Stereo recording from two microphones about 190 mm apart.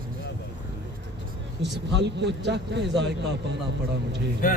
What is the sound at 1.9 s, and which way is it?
Speech, 65° right (ahead or behind).